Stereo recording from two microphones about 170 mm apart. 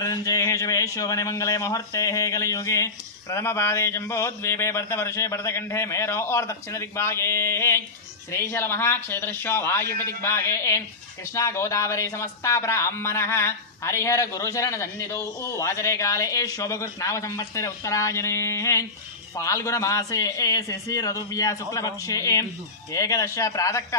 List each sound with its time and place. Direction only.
0.0 s a man's voice: 20° left (ahead or behind)